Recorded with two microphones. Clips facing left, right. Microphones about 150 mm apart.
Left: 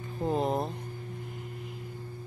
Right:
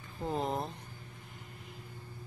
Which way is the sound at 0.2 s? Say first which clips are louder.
Left 5 dB; 20° left (ahead or behind).